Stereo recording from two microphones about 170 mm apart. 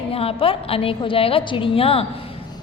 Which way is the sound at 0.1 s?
35° left (ahead or behind).